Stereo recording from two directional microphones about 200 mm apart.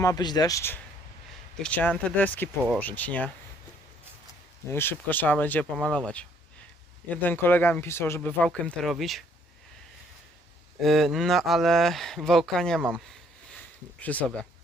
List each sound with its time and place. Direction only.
0.0 s speech: 20° left (ahead or behind)
4.7 s speech: 10° left (ahead or behind)
7.1 s speech: 10° left (ahead or behind)
10.8 s speech: centre (ahead or behind)
14.0 s speech: 5° left (ahead or behind)